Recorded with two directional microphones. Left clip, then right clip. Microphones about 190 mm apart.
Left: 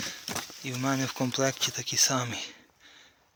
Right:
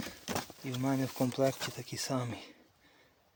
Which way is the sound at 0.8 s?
5° right (ahead or behind).